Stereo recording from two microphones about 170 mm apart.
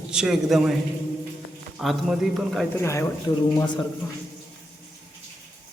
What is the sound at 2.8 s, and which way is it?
Speech, 15° left (ahead or behind).